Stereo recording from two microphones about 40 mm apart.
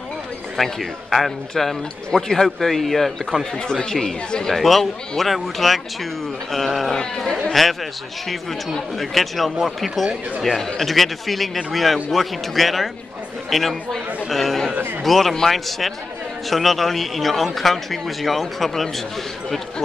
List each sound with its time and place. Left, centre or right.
0.6 s a man's voice: centre
3.9 s a man's voice: centre
4.6 s a man's voice: centre